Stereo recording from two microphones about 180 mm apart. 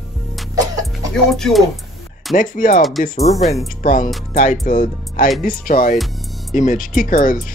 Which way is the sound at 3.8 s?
45° left (ahead or behind).